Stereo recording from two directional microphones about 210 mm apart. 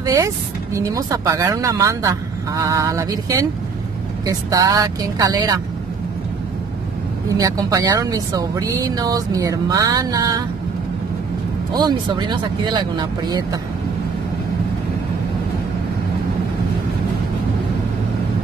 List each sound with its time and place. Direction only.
0.0 s speech: 15° right (ahead or behind)
7.3 s speech: 15° right (ahead or behind)
11.7 s speech: 20° right (ahead or behind)